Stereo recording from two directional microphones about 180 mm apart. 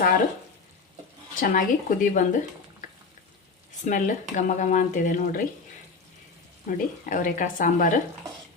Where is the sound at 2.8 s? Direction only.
45° left (ahead or behind).